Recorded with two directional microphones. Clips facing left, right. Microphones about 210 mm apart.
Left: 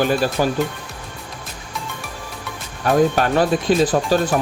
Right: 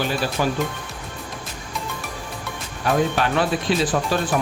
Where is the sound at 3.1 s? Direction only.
45° left (ahead or behind).